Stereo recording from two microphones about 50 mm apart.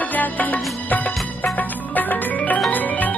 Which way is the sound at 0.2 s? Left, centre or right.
Left.